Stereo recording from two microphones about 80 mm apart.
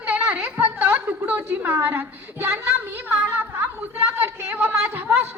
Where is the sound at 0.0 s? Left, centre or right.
Centre.